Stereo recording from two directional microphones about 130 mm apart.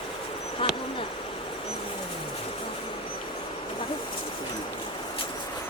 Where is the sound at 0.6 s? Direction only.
40° left (ahead or behind).